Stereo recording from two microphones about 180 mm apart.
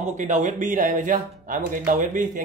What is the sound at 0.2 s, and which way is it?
Speech, 45° right (ahead or behind).